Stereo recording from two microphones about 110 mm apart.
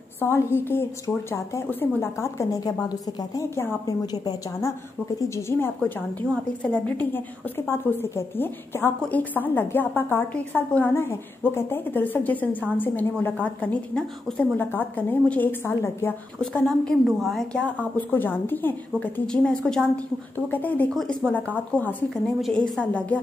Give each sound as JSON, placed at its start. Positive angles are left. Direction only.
{"t": 0.2, "sound": "speech", "side_deg": 20}
{"t": 3.5, "sound": "speech", "side_deg": 25}
{"t": 4.0, "sound": "speech", "side_deg": 35}
{"t": 5.8, "sound": "a woman's voice", "side_deg": 15}
{"t": 16.3, "sound": "a woman's voice", "side_deg": 10}
{"t": 18.1, "sound": "a woman's voice", "side_deg": 15}
{"t": 20.9, "sound": "a woman's voice", "side_deg": 0}
{"t": 21.5, "sound": "a woman's voice", "side_deg": 15}